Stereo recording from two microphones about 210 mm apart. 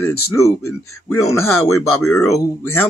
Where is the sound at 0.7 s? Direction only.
90° left.